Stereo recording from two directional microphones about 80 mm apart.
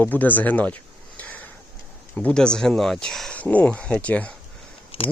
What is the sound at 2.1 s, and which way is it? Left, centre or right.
Speech, centre.